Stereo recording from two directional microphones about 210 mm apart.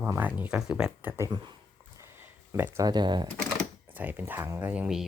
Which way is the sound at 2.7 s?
20° right (ahead or behind).